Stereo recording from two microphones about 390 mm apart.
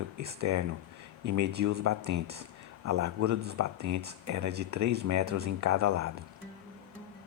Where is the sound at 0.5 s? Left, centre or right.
Right.